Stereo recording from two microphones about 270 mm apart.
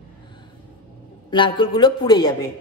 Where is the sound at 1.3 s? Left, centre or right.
Centre.